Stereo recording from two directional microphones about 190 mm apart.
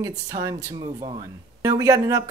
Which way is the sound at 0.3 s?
20° right (ahead or behind).